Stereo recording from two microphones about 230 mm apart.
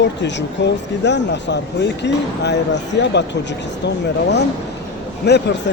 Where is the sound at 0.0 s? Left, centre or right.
Left.